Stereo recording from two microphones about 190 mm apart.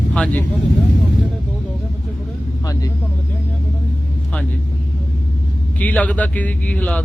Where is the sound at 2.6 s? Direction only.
20° left (ahead or behind).